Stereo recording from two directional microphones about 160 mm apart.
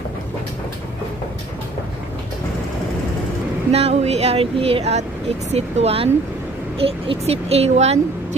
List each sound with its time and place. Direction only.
3.7 s speech: 40° right (ahead or behind)